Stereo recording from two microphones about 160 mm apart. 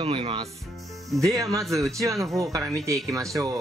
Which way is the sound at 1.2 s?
20° right (ahead or behind).